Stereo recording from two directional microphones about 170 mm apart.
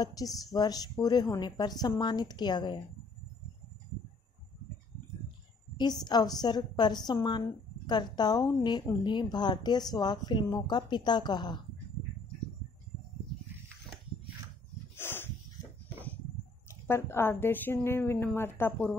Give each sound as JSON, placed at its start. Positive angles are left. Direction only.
{"t": 0.0, "sound": "a woman's voice", "side_deg": 20}
{"t": 5.8, "sound": "a woman's voice", "side_deg": 25}
{"t": 15.0, "sound": "dog", "side_deg": 15}
{"t": 16.6, "sound": "a woman's voice", "side_deg": 15}